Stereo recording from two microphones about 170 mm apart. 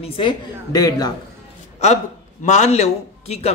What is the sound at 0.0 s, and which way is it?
A woman's voice, 30° left (ahead or behind).